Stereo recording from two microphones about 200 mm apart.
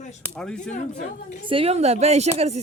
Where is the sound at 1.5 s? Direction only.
30° right (ahead or behind).